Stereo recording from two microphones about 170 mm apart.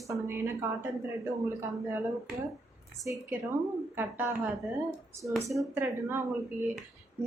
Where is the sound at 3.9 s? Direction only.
10° right (ahead or behind).